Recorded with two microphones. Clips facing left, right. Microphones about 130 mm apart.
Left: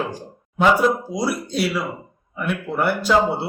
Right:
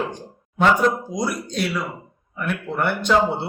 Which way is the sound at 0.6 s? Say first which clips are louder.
Left 1 dB; 5° left (ahead or behind).